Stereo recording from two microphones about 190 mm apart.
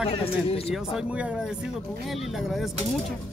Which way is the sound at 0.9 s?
5° right (ahead or behind).